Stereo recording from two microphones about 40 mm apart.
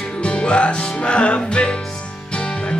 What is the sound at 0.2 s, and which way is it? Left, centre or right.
Music, left.